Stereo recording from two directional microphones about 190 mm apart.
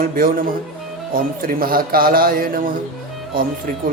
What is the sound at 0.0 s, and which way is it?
Speech, 50° right (ahead or behind).